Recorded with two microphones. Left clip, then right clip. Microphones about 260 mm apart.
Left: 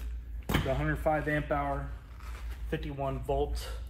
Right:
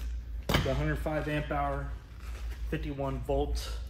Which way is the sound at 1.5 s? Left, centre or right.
Centre.